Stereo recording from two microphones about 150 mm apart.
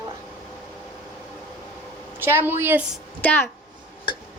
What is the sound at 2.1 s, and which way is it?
Speech, 15° right (ahead or behind).